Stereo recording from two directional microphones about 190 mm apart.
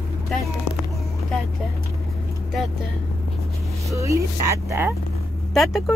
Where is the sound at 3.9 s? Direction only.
15° right (ahead or behind).